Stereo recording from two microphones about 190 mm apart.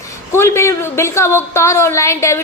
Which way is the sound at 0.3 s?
15° left (ahead or behind).